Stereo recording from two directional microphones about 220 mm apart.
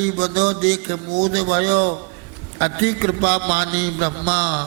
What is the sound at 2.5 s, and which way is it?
Mantra, 15° right (ahead or behind).